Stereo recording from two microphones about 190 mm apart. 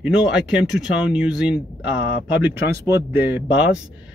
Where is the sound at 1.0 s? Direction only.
5° right (ahead or behind).